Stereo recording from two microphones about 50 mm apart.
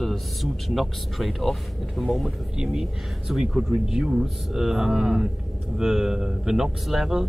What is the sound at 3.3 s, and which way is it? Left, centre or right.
Speech, centre.